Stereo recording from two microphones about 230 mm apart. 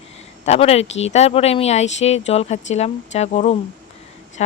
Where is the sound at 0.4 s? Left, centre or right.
Left.